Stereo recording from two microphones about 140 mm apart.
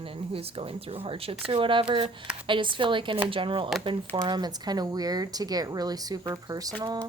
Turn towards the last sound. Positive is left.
turn(degrees=-30)  # may be behind; listen again after turning